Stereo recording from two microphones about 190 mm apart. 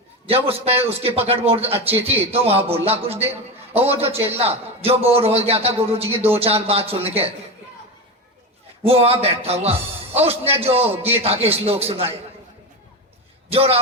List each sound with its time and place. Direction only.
0.3 s a man's voice: 30° right (ahead or behind)
8.8 s a man's voice: 30° right (ahead or behind)
13.5 s a man's voice: 30° right (ahead or behind)